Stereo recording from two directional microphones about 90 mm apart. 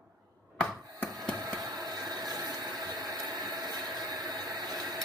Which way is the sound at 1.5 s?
45° right (ahead or behind).